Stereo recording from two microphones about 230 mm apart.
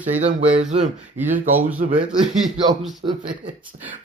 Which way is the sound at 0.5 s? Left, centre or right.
Right.